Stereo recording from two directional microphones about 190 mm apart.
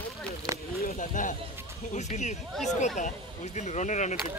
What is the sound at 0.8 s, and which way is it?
Speech, 45° left (ahead or behind).